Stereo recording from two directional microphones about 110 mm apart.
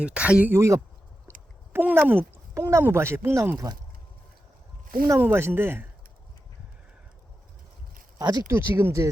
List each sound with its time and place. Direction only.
0.0 s speech: 10° right (ahead or behind)
0.5 s speech: 25° right (ahead or behind)
5.0 s speech: 25° right (ahead or behind)
8.2 s speech: 35° right (ahead or behind)
8.5 s speech: 20° right (ahead or behind)